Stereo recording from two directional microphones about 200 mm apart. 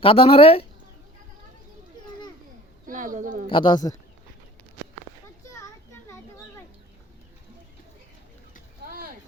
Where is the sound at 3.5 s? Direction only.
25° left (ahead or behind).